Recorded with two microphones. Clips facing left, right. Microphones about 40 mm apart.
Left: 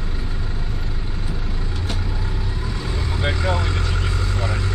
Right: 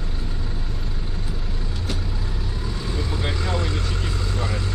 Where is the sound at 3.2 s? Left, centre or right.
Left.